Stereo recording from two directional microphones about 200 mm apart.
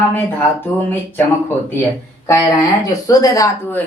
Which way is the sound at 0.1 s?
10° left (ahead or behind).